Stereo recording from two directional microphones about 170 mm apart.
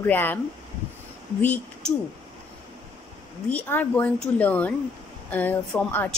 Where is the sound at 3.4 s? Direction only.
10° left (ahead or behind).